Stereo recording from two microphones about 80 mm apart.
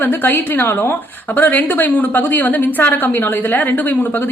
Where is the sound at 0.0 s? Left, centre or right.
Left.